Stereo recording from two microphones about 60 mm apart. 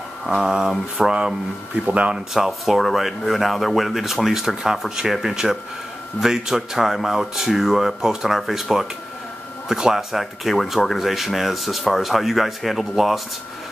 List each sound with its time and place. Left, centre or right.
0.3 s a sound: centre
1.8 s speech: centre
2.1 s speech: centre